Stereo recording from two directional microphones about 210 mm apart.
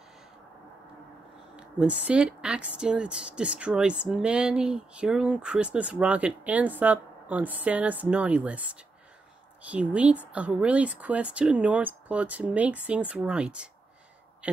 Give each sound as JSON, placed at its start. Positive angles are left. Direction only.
{"t": 1.6, "sound": "speech", "side_deg": -5}